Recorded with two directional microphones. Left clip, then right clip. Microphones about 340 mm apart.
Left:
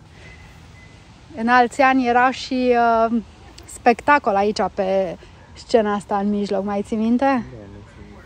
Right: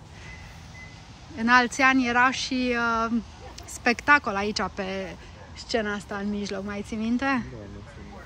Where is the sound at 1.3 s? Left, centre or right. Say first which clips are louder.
Left 5 dB; centre.